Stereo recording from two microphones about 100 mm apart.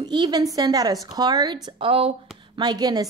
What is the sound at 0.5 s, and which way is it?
Speech, 40° right (ahead or behind).